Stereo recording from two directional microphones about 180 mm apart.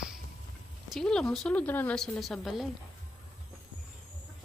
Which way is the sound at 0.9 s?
5° left (ahead or behind).